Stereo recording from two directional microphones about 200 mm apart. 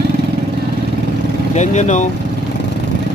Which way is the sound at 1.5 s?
35° left (ahead or behind).